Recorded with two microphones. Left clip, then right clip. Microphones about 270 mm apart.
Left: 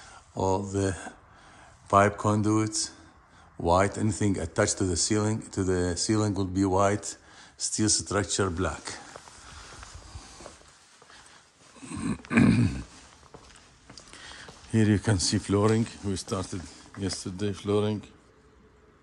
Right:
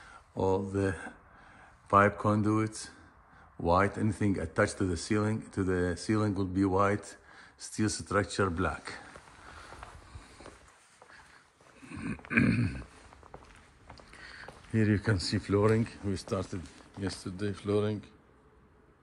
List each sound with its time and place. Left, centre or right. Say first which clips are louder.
0.3 s speech: left 2 dB; centre
11.9 s a sound: left 3 dB; centre
14.2 s speech: left 1 dB; centre